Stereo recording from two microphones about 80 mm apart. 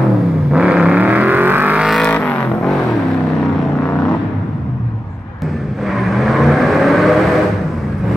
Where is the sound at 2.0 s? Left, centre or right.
Centre.